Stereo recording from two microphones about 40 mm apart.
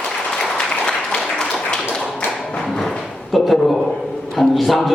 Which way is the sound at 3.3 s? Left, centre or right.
Centre.